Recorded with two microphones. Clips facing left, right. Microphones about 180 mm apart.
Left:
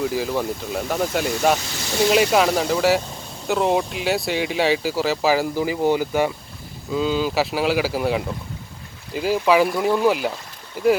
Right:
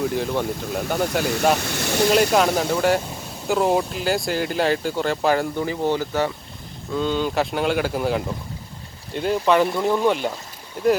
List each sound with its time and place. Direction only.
0.0 s speech: centre (ahead or behind)
1.5 s speech: 65° right (ahead or behind)
2.1 s speech: centre (ahead or behind)